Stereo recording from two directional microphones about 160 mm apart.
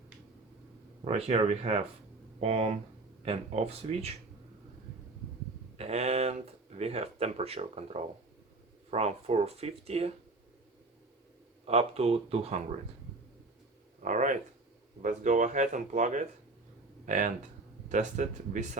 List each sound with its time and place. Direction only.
1.0 s speech: 40° right (ahead or behind)
5.7 s speech: 40° right (ahead or behind)
11.6 s speech: 40° right (ahead or behind)
14.0 s speech: 50° right (ahead or behind)